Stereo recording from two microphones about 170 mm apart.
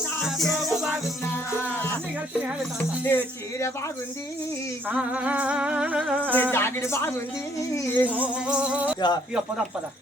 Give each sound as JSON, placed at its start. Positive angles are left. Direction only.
{"t": 0.2, "sound": "music", "side_deg": 0}
{"t": 1.2, "sound": "music", "side_deg": 15}
{"t": 2.7, "sound": "speech", "side_deg": 15}
{"t": 4.9, "sound": "speech", "side_deg": -10}
{"t": 6.3, "sound": "speech", "side_deg": 10}
{"t": 8.0, "sound": "speech", "side_deg": -10}